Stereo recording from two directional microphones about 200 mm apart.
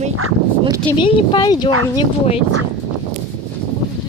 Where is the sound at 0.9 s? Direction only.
25° left (ahead or behind).